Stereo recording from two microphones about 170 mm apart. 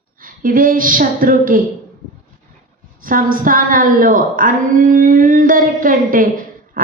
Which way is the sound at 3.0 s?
55° right (ahead or behind).